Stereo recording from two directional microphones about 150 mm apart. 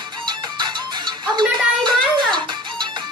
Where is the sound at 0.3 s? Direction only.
30° right (ahead or behind).